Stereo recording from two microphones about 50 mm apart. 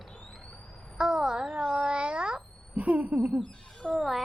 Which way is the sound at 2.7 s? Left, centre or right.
Right.